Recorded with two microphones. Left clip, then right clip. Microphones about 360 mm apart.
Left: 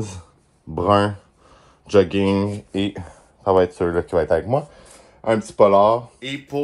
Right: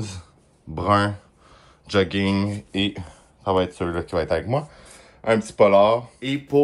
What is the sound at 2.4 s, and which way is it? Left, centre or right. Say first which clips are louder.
Speech: left 1 dB; left.